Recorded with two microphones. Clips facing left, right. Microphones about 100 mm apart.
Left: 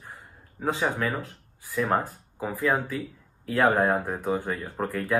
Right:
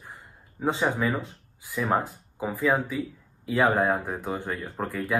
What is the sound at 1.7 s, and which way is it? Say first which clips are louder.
Speech: even; 5° right (ahead or behind).